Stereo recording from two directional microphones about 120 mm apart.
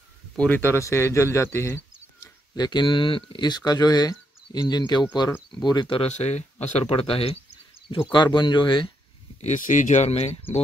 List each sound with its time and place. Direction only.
0.4 s speech: 15° left (ahead or behind)
2.5 s speech: 35° left (ahead or behind)
6.0 s speech: 65° left (ahead or behind)
6.9 s a sound: 50° left (ahead or behind)
8.1 s speech: 40° left (ahead or behind)
9.4 s speech: 90° left; by 10.4 s 65° left (ahead or behind)